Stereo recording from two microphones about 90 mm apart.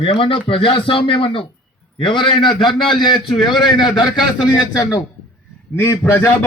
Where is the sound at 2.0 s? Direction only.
65° left (ahead or behind); by 5.0 s 45° left (ahead or behind).